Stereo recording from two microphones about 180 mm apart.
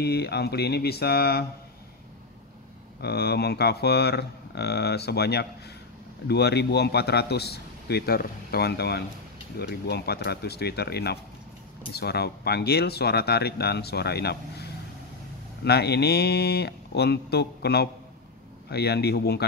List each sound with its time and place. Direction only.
0.0 s speech: 65° left (ahead or behind)
3.0 s speech: 65° left (ahead or behind)